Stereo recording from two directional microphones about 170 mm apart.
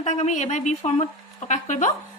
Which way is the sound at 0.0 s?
45° left (ahead or behind).